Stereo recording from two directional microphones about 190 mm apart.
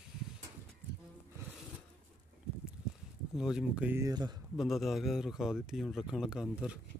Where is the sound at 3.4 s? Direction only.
5° right (ahead or behind); by 4.3 s 20° right (ahead or behind).